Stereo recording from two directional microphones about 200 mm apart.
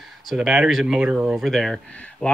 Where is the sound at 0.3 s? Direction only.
5° right (ahead or behind).